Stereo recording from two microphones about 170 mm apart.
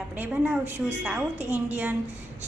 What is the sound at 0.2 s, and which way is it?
A woman's voice, 10° right (ahead or behind).